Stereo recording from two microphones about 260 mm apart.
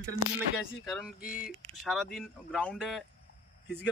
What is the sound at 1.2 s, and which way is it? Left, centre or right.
Speech, left.